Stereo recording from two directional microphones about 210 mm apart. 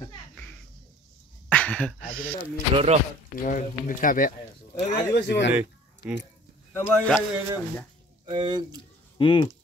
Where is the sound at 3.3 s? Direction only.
40° left (ahead or behind).